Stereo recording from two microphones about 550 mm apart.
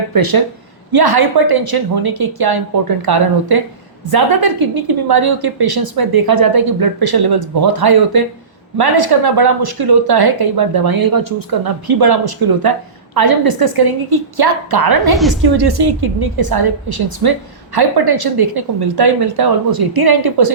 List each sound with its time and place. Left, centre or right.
0.1 s a woman's voice: right
15.1 s a woman's voice: centre
15.4 s a woman's voice: right